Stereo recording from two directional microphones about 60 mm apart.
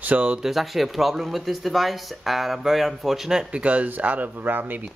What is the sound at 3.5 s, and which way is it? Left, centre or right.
Speech, right.